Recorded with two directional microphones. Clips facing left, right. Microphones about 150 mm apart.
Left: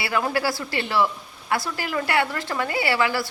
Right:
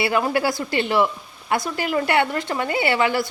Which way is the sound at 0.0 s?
20° right (ahead or behind).